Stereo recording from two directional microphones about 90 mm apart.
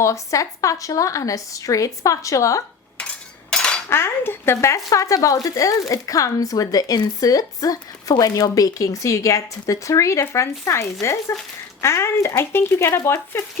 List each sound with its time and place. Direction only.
0.0 s speech: 35° left (ahead or behind)
3.5 s cutlery: 10° left (ahead or behind)
3.8 s speech: 25° left (ahead or behind)